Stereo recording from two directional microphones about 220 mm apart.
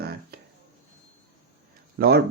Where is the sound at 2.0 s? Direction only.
45° right (ahead or behind).